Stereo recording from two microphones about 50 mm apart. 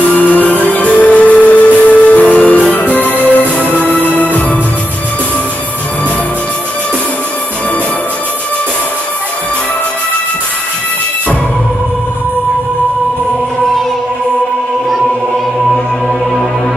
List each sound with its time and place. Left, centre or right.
0.1 s music: left